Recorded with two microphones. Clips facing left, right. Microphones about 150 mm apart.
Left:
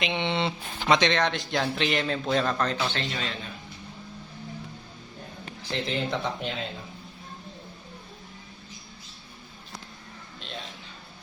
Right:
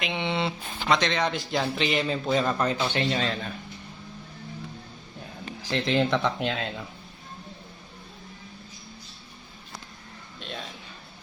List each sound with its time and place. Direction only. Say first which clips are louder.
0.0 s speech: left 1 dB; 5° right (ahead or behind)
3.1 s a man's voice: right 6 dB; 45° right (ahead or behind)
5.7 s speech: right 5 dB; 90° right